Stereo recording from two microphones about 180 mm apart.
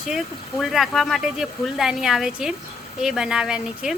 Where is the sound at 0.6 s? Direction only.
Centre (ahead or behind).